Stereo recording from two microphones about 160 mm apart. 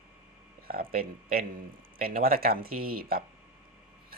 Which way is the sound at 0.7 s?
65° right (ahead or behind).